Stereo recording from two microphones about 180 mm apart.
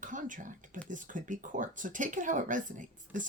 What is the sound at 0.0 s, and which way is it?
Speech, 45° right (ahead or behind).